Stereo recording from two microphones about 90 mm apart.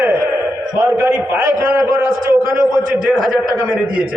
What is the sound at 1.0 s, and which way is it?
Speech, 20° right (ahead or behind).